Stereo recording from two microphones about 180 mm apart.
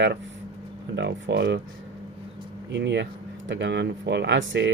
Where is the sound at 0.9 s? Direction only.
70° right (ahead or behind).